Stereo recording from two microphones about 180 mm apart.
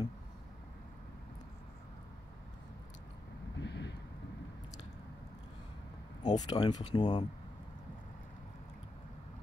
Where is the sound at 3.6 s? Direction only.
75° left (ahead or behind).